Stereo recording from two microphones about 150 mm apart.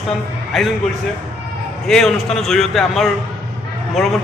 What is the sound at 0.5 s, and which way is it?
Speech, centre (ahead or behind).